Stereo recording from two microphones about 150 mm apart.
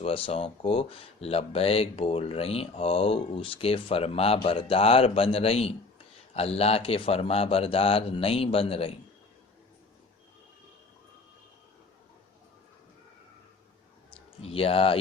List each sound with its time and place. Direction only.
0.0 s speech: 40° left (ahead or behind)
14.4 s speech: 40° left (ahead or behind)